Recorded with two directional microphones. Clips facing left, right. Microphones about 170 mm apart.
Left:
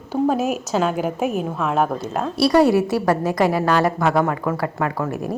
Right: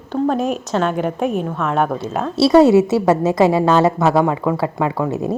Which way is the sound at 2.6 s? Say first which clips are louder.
Right 6 dB; 20° right (ahead or behind).